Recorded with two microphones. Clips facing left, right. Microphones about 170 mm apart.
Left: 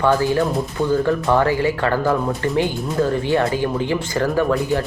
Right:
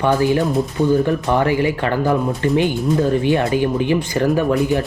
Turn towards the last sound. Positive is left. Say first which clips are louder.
# right 2 dB
turn(degrees=-20)  # may be behind; listen again after turning